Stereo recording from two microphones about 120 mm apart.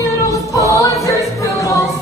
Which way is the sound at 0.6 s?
25° left (ahead or behind).